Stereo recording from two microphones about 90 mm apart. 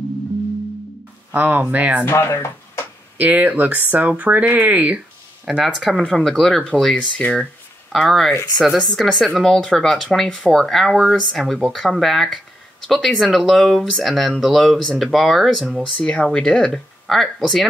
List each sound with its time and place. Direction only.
1.3 s speech: 20° right (ahead or behind)
2.0 s speech: 30° left (ahead or behind)
3.2 s speech: 20° right (ahead or behind)
5.4 s speech: 5° right (ahead or behind)
16.0 s speech: 10° left (ahead or behind)